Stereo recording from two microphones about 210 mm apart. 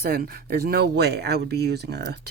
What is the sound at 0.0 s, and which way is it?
Speech, 45° right (ahead or behind).